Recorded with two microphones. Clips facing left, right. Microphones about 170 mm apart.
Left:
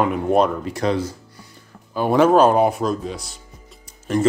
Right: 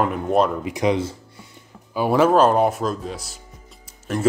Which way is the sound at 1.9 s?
5° right (ahead or behind).